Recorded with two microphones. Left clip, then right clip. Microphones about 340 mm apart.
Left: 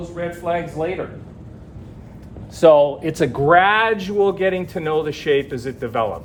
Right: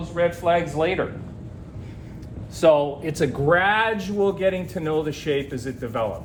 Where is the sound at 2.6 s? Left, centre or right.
Left.